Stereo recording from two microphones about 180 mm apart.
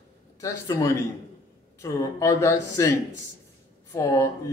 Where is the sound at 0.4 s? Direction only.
15° left (ahead or behind).